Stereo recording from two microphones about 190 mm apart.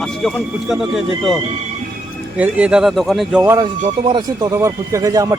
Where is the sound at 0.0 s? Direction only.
Centre (ahead or behind).